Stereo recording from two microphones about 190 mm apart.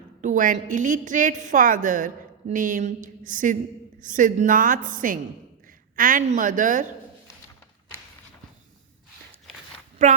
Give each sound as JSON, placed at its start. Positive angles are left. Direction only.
{"t": 0.2, "sound": "a woman's voice", "side_deg": -45}
{"t": 10.0, "sound": "a woman's voice", "side_deg": -40}